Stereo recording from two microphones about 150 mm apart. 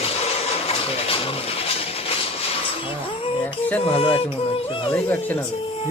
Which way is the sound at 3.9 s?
40° left (ahead or behind).